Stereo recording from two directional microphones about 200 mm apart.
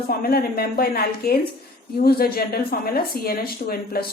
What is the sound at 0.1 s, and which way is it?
Speech, 50° left (ahead or behind).